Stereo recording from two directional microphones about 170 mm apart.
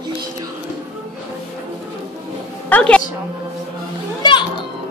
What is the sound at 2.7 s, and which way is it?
Speech, 5° left (ahead or behind).